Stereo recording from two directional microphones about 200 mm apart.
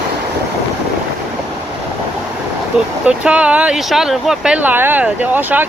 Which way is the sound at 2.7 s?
5° right (ahead or behind).